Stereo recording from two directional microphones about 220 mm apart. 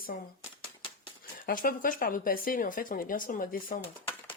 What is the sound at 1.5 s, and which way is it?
Speech, 40° left (ahead or behind).